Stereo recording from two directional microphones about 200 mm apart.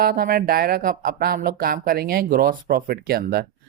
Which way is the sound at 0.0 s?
50° right (ahead or behind).